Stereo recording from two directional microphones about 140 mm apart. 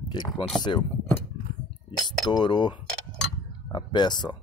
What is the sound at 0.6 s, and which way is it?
Speech, 35° left (ahead or behind).